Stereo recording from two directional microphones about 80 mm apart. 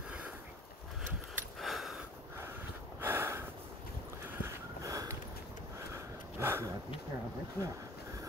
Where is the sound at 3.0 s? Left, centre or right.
Right.